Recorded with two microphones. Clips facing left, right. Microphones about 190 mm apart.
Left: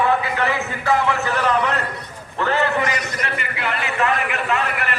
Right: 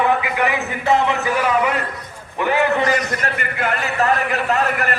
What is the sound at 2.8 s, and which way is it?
A man's voice, 45° right (ahead or behind).